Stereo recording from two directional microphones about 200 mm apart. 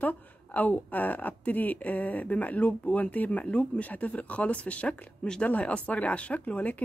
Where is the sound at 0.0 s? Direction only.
10° left (ahead or behind).